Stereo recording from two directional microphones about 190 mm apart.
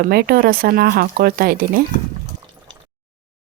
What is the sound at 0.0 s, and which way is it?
Speech, 55° right (ahead or behind).